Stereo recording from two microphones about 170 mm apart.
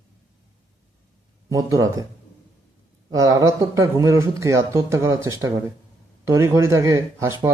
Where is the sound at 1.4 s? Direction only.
20° right (ahead or behind).